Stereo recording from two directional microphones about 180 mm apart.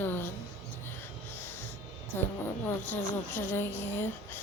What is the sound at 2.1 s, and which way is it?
Speech, 10° left (ahead or behind).